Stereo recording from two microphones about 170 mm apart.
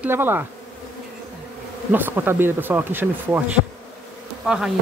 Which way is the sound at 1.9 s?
10° right (ahead or behind).